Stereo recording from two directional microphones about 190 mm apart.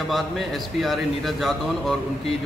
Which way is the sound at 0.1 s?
Centre (ahead or behind).